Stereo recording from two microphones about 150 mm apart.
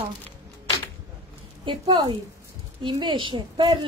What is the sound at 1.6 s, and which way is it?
A woman's voice, 35° right (ahead or behind).